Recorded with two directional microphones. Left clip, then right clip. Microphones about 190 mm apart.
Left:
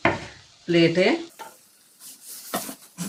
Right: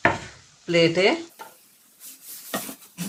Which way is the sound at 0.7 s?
45° right (ahead or behind).